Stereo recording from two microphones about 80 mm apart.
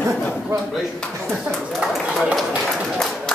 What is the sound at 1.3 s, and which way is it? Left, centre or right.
Speech, centre.